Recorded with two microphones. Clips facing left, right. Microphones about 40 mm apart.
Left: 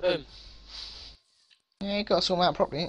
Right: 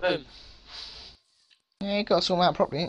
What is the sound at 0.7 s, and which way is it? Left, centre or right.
Snort, centre.